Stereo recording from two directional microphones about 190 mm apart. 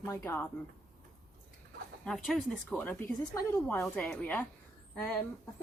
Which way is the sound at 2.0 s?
Centre (ahead or behind).